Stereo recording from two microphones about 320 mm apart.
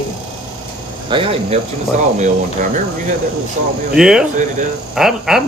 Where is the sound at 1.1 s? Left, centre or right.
Centre.